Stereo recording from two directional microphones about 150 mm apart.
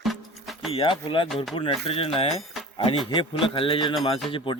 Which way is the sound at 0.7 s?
35° left (ahead or behind).